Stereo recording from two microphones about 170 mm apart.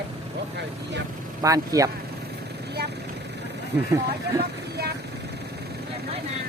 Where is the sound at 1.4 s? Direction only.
20° right (ahead or behind).